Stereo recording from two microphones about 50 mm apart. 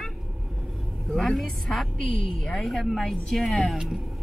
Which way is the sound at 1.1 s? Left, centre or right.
Centre.